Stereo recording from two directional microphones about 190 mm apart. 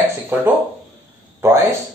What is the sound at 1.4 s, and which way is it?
Speech, 15° right (ahead or behind).